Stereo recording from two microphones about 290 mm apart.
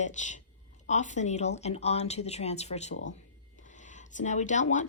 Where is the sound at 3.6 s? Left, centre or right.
Left.